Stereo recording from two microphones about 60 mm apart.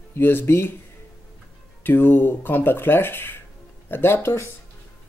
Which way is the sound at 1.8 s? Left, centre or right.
Left.